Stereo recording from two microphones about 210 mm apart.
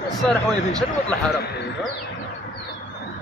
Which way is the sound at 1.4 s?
50° left (ahead or behind).